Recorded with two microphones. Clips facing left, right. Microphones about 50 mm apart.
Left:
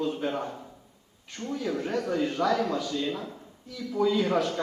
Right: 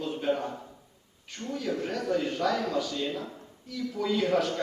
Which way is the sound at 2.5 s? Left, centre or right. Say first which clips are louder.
Left 2 dB; centre.